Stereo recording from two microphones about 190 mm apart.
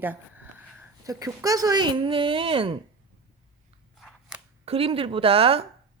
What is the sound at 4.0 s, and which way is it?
Scissors, centre (ahead or behind).